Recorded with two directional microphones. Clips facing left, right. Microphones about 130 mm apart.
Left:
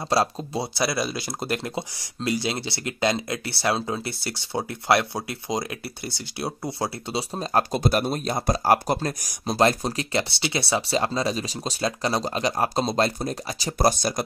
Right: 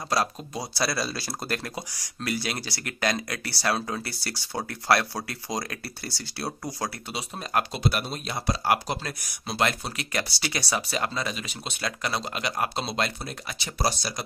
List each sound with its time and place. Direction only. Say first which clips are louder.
0.1 s speech: left 4 dB; 30° left (ahead or behind)
13.7 s speech: left 6 dB; 50° left (ahead or behind)